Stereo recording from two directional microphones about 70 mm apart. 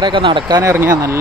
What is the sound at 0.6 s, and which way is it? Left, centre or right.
Speech, right.